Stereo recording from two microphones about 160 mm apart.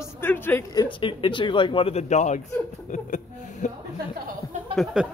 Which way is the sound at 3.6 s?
50° left (ahead or behind).